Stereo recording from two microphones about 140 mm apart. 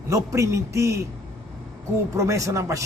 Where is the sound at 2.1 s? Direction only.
20° right (ahead or behind).